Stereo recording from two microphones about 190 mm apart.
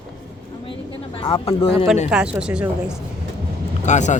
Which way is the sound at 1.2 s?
30° left (ahead or behind).